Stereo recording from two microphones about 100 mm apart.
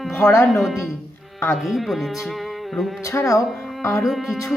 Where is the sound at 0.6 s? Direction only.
5° right (ahead or behind).